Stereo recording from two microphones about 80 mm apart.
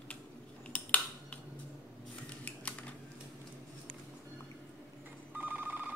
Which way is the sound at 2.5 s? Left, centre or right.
Centre.